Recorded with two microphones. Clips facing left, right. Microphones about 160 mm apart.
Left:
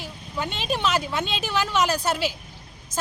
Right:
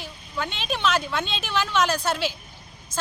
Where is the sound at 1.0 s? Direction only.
10° left (ahead or behind).